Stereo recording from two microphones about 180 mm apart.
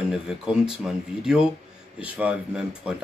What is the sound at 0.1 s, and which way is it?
Speech, 5° right (ahead or behind).